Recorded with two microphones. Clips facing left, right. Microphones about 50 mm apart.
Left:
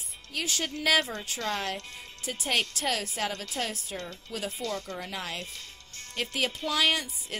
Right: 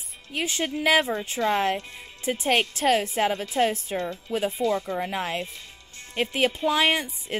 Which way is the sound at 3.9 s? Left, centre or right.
Centre.